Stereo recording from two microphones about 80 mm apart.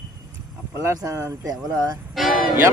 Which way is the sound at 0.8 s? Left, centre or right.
Right.